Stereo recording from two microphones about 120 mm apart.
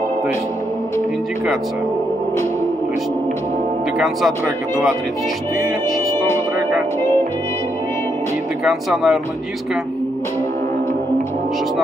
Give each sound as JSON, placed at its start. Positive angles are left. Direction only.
{"t": 8.6, "sound": "speech", "side_deg": 0}